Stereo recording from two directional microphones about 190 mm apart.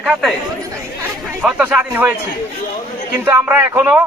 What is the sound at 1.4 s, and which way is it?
Speech, 10° right (ahead or behind).